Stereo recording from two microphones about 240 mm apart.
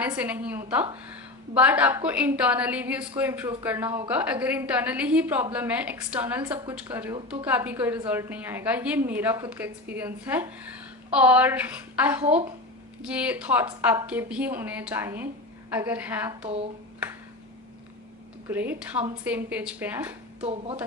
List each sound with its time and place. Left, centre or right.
0.0 s a woman's voice: centre
12.2 s speech: right
13.0 s a woman's voice: centre
18.4 s a woman's voice: centre
20.4 s speech: right